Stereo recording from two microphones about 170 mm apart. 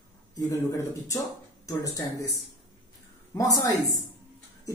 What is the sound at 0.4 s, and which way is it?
Speech, 20° left (ahead or behind).